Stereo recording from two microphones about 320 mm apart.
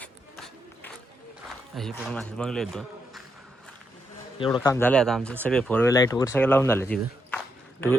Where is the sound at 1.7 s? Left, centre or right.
Centre.